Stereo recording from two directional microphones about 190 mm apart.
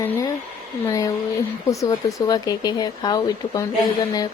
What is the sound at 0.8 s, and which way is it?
Speech, 20° left (ahead or behind).